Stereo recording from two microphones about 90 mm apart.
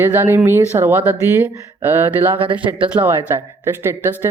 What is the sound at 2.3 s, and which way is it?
Speech, 70° right (ahead or behind).